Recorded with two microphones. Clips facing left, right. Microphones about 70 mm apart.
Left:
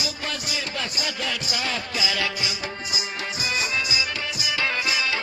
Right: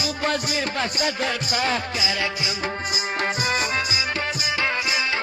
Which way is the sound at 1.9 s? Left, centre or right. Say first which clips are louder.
Right 1 dB; right.